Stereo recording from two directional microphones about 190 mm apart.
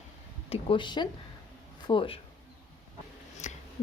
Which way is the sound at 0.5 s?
25° left (ahead or behind).